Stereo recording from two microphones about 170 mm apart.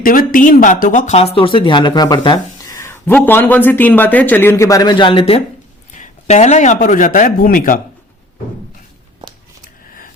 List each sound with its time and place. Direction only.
0.0 s speech: 55° left (ahead or behind); by 5.4 s 30° left (ahead or behind)
5.9 s a man's voice: 45° left (ahead or behind)